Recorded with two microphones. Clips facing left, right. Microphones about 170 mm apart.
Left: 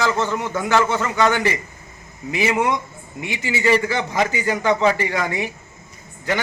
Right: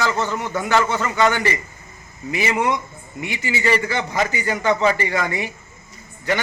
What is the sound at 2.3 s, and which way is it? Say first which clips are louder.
A man's voice: left 1 dB; 10° left (ahead or behind).